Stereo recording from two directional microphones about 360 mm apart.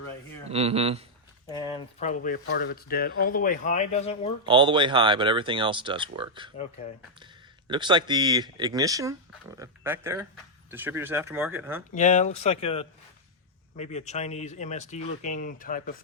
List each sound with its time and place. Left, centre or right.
0.4 s speech: centre
1.5 s speech: centre
4.4 s speech: centre
7.7 s speech: centre
11.9 s speech: centre